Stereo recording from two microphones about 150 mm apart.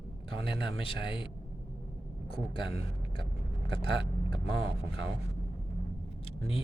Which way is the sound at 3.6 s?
35° left (ahead or behind).